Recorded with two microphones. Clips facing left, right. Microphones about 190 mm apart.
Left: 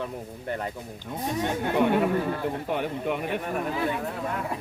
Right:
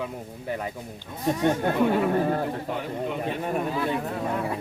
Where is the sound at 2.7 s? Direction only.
65° left (ahead or behind).